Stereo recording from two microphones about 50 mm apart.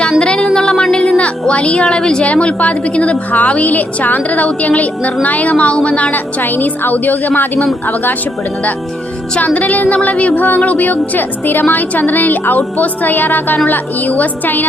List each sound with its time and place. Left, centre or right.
0.2 s a sound: centre
1.2 s speech: left
2.2 s a woman's voice: left
6.4 s a woman's voice: left
9.6 s a woman's voice: left